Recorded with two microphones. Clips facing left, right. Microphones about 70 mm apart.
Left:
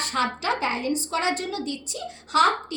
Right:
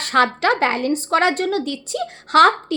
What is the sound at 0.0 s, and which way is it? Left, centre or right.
A woman's voice, right.